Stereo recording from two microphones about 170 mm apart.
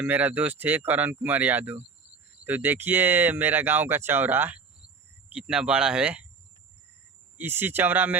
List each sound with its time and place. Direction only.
0.0 s speech: 10° right (ahead or behind)
7.3 s speech: 10° right (ahead or behind)